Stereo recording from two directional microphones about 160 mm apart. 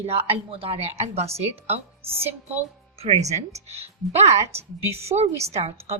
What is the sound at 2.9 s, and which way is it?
A woman's voice, 40° right (ahead or behind).